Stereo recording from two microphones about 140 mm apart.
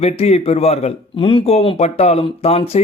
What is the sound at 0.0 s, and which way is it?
Speech, 50° left (ahead or behind).